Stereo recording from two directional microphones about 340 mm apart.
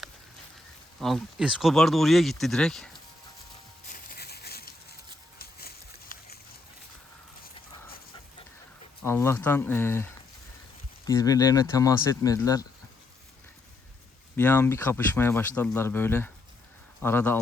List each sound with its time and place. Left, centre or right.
0.9 s speech: centre
3.8 s a sound: left
9.0 s speech: centre
14.3 s speech: centre